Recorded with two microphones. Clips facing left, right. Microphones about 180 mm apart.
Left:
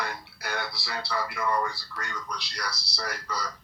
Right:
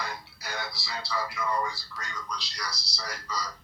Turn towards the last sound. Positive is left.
turn(degrees=60)  # may be behind; listen again after turning